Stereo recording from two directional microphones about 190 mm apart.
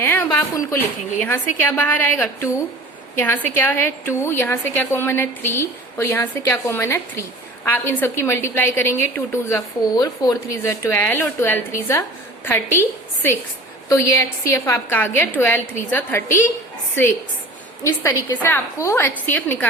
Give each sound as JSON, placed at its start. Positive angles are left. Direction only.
{"t": 0.0, "sound": "a woman's voice", "side_deg": 10}
{"t": 13.9, "sound": "a woman's voice", "side_deg": 15}
{"t": 17.8, "sound": "a woman's voice", "side_deg": 15}